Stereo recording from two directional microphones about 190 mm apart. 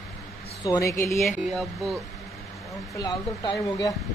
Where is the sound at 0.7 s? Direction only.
15° left (ahead or behind).